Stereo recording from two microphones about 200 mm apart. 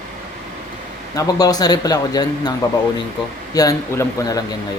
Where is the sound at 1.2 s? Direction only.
20° left (ahead or behind).